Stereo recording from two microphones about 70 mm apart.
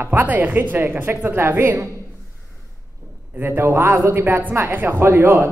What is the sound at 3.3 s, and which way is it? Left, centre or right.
Speech, right.